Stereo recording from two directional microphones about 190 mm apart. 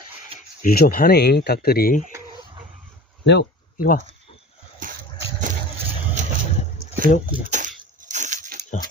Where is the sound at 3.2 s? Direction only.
65° left (ahead or behind).